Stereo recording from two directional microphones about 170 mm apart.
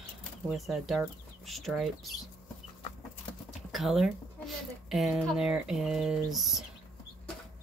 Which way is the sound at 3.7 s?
Centre (ahead or behind).